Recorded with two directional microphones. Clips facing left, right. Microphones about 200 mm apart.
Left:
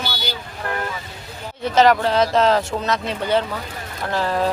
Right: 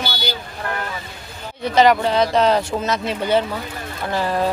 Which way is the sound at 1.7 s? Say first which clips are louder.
Even; centre (ahead or behind).